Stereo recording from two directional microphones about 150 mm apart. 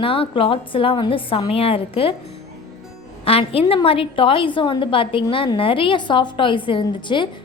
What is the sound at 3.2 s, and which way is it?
A woman's voice, 40° left (ahead or behind).